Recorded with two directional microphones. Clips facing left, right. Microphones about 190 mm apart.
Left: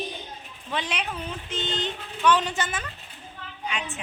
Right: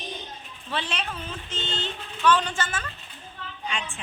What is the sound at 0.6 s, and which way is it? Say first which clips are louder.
A woman's voice: left 1 dB; 15° left (ahead or behind).